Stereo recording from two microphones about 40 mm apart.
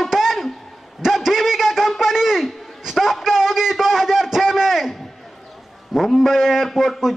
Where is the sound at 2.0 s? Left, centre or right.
Centre.